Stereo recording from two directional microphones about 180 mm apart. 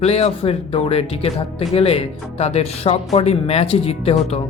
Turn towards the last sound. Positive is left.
turn(degrees=35)  # may be behind; listen again after turning